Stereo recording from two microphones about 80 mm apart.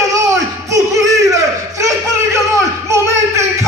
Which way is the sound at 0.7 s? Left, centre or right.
Right.